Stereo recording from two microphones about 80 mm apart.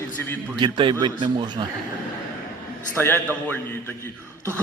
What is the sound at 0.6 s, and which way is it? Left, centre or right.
A man's voice, right.